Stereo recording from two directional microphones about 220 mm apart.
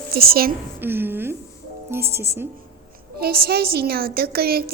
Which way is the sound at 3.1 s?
45° right (ahead or behind).